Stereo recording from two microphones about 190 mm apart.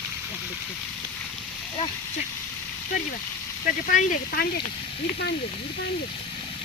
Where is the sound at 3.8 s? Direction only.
50° left (ahead or behind).